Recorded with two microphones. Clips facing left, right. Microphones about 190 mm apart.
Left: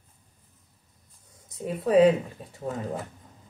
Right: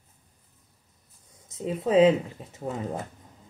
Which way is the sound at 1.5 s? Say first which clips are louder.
Left 1 dB; 20° right (ahead or behind).